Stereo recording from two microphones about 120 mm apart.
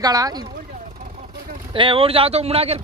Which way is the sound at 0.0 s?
30° right (ahead or behind).